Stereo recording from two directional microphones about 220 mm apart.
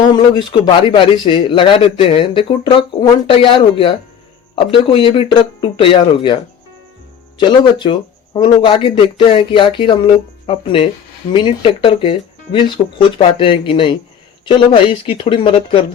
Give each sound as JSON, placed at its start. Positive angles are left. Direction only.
{"t": 0.2, "sound": "a man's voice", "side_deg": 20}
{"t": 7.3, "sound": "a man's voice", "side_deg": 20}